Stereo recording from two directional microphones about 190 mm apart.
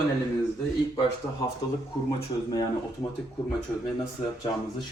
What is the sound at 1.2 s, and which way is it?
Speech, 15° left (ahead or behind).